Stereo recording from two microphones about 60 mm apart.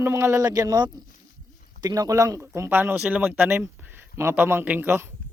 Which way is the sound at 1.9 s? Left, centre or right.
Right.